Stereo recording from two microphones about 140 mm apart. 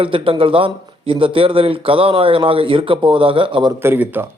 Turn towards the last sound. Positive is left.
turn(degrees=-15)  # may be behind; listen again after turning